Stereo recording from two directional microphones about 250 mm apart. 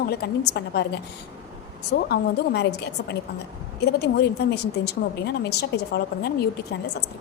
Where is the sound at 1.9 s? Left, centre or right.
Left.